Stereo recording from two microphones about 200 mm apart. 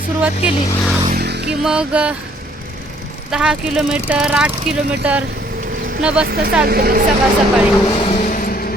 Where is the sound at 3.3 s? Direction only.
5° right (ahead or behind).